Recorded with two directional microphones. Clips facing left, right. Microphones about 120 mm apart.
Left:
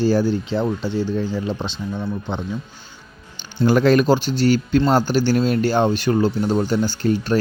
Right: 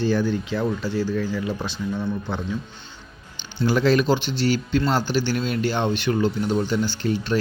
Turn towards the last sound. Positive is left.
turn(degrees=45)  # may be behind; listen again after turning